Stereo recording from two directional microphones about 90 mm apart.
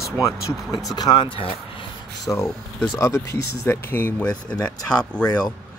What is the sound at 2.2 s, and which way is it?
Speech, 30° left (ahead or behind).